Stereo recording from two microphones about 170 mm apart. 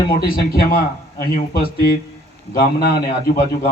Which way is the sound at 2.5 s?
60° left (ahead or behind).